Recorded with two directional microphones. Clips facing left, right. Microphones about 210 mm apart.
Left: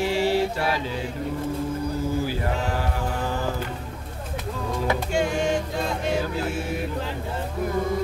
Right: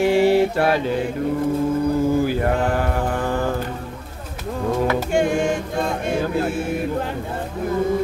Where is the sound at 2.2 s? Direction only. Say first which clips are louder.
Right 7 dB; 55° right (ahead or behind).